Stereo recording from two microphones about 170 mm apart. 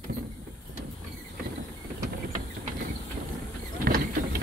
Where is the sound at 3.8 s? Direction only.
60° right (ahead or behind).